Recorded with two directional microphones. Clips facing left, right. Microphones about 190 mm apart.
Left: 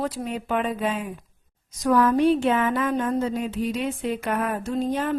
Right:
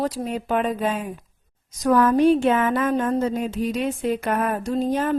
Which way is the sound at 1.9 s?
45° right (ahead or behind).